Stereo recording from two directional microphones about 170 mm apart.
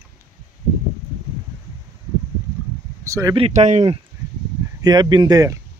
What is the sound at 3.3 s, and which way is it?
Speech, 40° right (ahead or behind).